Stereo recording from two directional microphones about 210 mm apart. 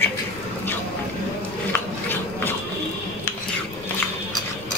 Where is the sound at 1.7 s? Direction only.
10° left (ahead or behind).